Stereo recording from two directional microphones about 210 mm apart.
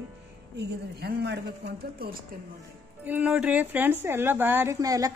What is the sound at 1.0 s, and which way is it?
Speech, 50° right (ahead or behind).